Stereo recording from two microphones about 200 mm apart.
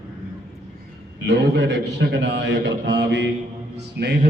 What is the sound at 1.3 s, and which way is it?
A man's voice, 65° right (ahead or behind).